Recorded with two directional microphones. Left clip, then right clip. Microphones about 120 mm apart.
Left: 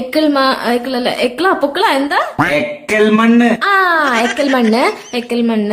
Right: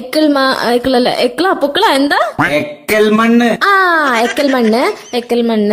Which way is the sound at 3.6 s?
55° right (ahead or behind).